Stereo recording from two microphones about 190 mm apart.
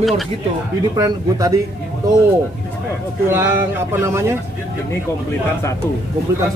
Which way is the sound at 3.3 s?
10° right (ahead or behind).